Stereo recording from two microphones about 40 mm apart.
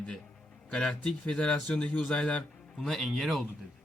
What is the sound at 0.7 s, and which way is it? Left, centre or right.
Speech, centre.